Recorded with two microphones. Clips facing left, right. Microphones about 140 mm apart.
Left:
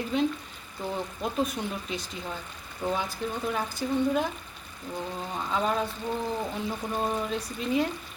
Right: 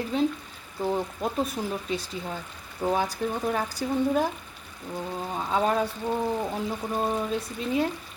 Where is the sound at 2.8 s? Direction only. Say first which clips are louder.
Right 4 dB; 45° right (ahead or behind).